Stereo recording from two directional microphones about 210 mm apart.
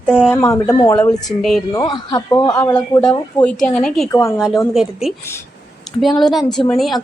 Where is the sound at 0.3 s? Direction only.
10° left (ahead or behind).